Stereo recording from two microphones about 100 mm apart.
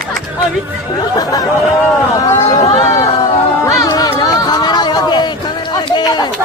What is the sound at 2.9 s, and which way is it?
Music, 30° left (ahead or behind).